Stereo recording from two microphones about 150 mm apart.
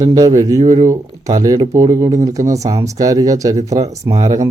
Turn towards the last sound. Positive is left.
turn(degrees=-25)  # may be behind; listen again after turning